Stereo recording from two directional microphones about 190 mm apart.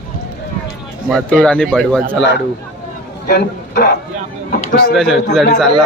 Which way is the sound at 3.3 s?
60° left (ahead or behind).